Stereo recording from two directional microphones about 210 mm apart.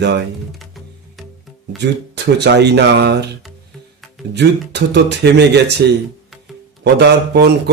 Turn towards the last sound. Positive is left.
turn(degrees=-55)  # may be behind; listen again after turning